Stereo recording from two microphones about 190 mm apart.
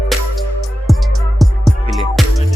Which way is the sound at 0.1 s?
Centre (ahead or behind).